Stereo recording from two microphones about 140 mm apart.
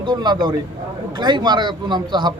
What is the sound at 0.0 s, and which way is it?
A man's voice, 30° right (ahead or behind).